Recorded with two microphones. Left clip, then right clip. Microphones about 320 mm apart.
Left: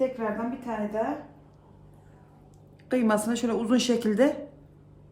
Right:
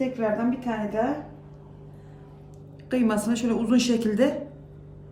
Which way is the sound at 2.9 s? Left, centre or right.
Centre.